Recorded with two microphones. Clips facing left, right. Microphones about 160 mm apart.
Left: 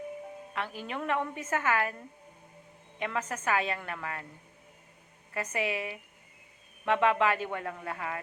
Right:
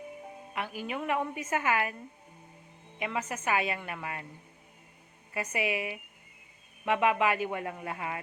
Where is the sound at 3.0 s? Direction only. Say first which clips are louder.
Even; 10° right (ahead or behind).